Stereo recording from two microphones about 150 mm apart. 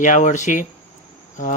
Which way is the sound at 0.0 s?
55° left (ahead or behind).